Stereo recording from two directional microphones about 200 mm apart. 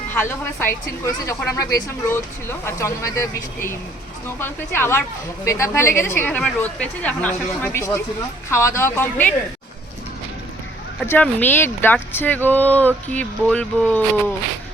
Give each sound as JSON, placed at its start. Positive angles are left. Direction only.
{"t": 0.1, "sound": "a woman's voice", "side_deg": 10}
{"t": 11.0, "sound": "a woman's voice", "side_deg": 10}